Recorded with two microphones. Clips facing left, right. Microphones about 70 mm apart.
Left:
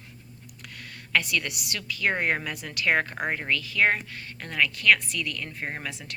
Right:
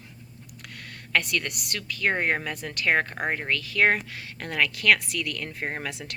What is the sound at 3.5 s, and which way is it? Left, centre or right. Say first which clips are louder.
A woman's voice: right 1 dB; right.